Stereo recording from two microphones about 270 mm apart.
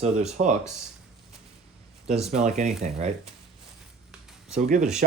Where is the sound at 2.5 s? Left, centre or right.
Right.